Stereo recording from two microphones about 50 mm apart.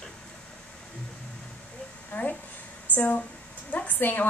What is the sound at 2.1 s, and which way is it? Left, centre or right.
Speech, left.